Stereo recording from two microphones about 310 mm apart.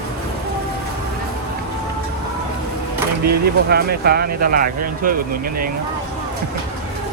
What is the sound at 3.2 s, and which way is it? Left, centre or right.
Speech, right.